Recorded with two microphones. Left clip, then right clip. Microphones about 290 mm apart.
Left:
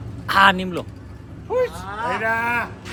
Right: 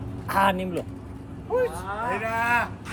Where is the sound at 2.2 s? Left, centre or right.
Centre.